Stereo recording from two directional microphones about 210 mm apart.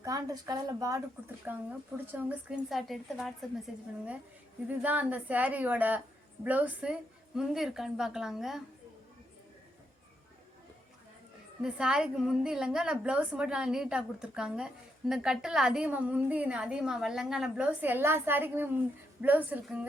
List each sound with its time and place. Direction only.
0.0 s a woman's voice: 15° right (ahead or behind); by 3.3 s centre (ahead or behind)
4.7 s a woman's voice: 10° right (ahead or behind)
11.6 s a woman's voice: 5° right (ahead or behind)